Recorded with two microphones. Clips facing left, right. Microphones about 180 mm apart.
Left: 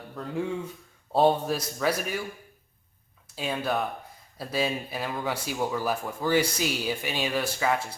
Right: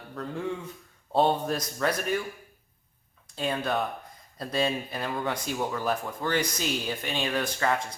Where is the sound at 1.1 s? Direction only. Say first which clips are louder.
Left 2 dB; 5° left (ahead or behind).